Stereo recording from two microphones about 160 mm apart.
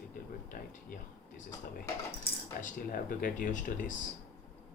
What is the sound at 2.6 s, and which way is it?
Speech, 55° left (ahead or behind).